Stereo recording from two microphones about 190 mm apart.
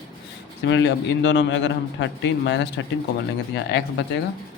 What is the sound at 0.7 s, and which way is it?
A man's voice, 70° left (ahead or behind).